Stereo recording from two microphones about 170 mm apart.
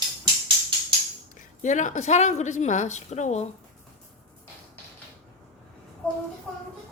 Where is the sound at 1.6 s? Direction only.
45° left (ahead or behind).